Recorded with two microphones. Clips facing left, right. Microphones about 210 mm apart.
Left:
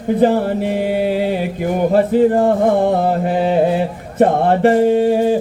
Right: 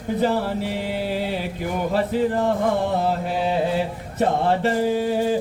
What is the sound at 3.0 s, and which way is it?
Speech, 55° left (ahead or behind).